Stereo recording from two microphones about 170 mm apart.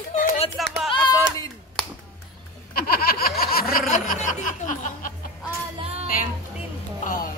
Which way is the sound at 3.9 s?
50° left (ahead or behind).